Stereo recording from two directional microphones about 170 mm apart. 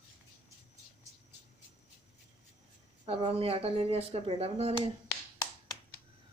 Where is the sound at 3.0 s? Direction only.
35° right (ahead or behind).